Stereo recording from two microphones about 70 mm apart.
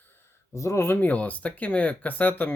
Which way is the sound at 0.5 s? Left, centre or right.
Left.